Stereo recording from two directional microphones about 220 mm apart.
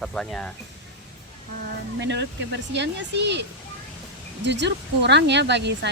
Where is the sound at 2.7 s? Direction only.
50° right (ahead or behind).